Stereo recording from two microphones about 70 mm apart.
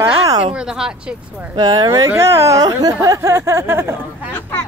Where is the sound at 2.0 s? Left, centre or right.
Right.